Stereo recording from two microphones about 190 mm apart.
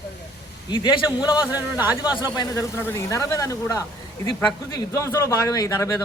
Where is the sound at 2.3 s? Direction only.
20° left (ahead or behind).